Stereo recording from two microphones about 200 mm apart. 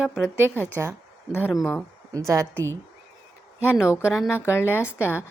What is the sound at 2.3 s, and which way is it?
Speech, 15° right (ahead or behind).